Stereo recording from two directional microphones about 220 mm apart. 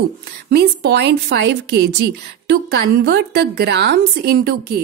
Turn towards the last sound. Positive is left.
turn(degrees=-45)  # may be behind; listen again after turning